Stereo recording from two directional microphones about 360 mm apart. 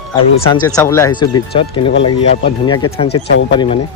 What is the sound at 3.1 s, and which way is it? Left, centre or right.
Speech, left.